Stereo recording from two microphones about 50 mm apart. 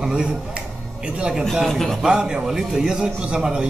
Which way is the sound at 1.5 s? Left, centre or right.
Centre.